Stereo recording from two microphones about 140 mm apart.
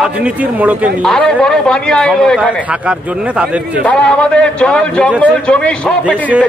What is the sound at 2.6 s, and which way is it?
Speech, 10° right (ahead or behind).